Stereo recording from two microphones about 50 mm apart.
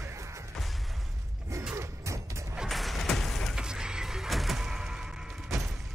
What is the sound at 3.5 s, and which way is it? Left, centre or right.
Music, centre.